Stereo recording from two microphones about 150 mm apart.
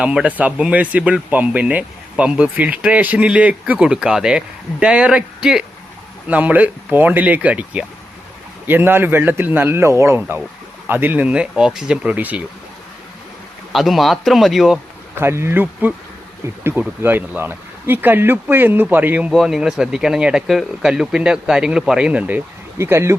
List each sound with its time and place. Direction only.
0.0 s speech: 5° right (ahead or behind)
13.7 s speech: centre (ahead or behind)
15.1 s speech: 15° right (ahead or behind)
17.0 s speech: 15° right (ahead or behind)